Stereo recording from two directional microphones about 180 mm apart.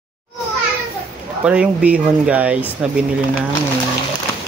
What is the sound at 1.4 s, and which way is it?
Speech, 5° right (ahead or behind).